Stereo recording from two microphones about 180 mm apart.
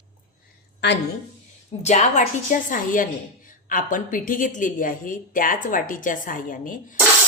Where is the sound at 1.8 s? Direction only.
40° left (ahead or behind).